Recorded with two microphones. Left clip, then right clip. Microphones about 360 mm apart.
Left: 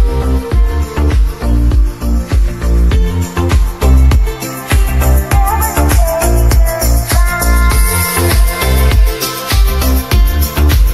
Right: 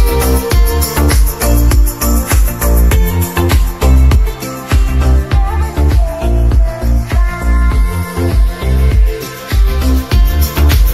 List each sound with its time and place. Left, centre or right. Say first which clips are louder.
0.2 s music: right 4 dB; right
2.2 s music: right 5 dB; right; by 4.2 s centre
4.6 s music: left 4 dB; centre
6.2 s music: left 4 dB; left
9.5 s music: left 3 dB; centre